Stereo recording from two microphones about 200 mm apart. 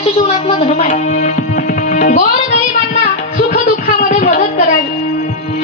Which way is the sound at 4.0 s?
45° left (ahead or behind).